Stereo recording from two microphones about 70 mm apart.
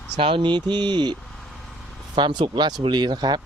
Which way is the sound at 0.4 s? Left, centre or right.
Right.